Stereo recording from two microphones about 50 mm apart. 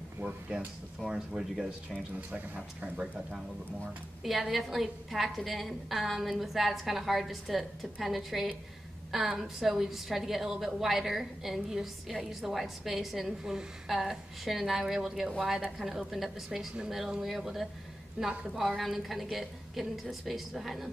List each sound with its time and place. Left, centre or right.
0.2 s speech: right
1.0 s speech: centre
1.4 s a woman's voice: centre
2.3 s speech: right
4.2 s a woman's voice: centre
18.2 s speech: centre
18.6 s a woman's voice: centre